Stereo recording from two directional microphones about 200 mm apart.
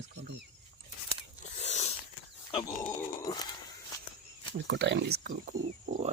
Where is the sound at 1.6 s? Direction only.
35° left (ahead or behind).